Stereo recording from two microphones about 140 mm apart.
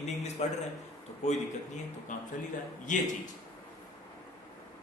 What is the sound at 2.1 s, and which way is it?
Speech, 65° left (ahead or behind).